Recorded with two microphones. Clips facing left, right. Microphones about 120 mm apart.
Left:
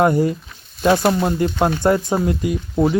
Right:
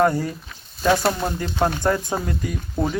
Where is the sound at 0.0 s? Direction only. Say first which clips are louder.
Left 4 dB; 15° left (ahead or behind).